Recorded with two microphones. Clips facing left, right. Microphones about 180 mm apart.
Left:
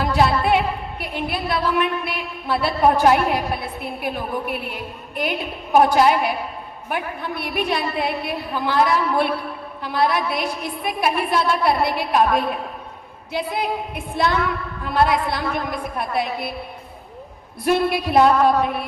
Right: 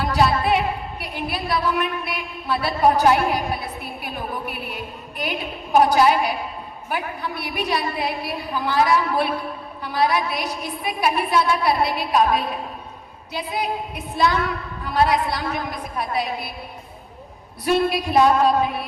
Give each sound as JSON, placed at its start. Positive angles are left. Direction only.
{"t": 0.0, "sound": "a sound", "side_deg": 55}
{"t": 1.0, "sound": "a woman's voice", "side_deg": 55}
{"t": 7.3, "sound": "a woman's voice", "side_deg": 55}
{"t": 17.7, "sound": "a woman's voice", "side_deg": 55}